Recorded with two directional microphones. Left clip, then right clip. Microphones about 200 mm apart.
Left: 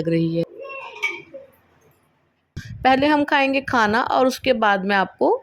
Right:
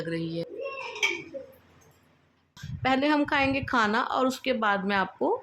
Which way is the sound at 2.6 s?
30° left (ahead or behind).